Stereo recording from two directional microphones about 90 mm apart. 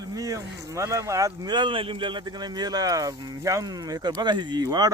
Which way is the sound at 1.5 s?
65° right (ahead or behind).